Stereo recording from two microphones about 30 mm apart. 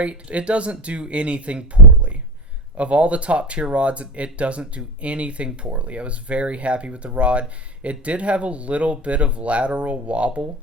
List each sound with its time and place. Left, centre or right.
0.0 s speech: right